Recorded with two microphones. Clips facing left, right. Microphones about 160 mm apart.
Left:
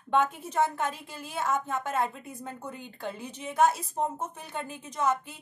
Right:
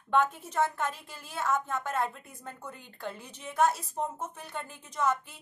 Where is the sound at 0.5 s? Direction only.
15° left (ahead or behind).